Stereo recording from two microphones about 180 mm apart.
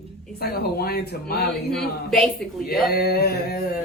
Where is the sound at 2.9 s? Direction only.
60° left (ahead or behind).